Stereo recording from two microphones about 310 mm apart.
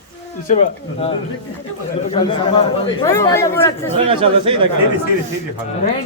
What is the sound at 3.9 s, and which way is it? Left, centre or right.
Speech, centre.